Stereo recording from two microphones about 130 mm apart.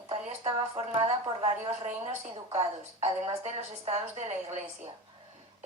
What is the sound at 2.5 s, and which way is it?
A woman's voice, 50° right (ahead or behind).